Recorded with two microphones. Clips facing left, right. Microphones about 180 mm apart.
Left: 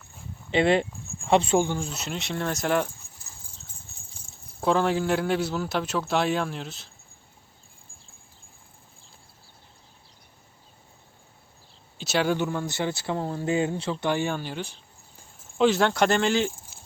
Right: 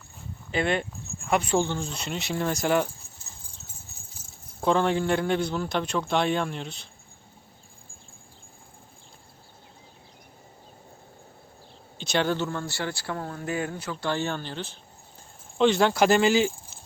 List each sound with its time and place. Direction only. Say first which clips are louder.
0.5 s speech: left 5 dB; 30° left (ahead or behind)
1.5 s a man's voice: left 2 dB; 10° left (ahead or behind)
4.6 s a man's voice: even; centre (ahead or behind)
11.9 s speech: left 1 dB; 5° left (ahead or behind); by 14.1 s 30° left (ahead or behind)
14.1 s a man's voice: left 1 dB; 15° left (ahead or behind); by 16.5 s 5° right (ahead or behind)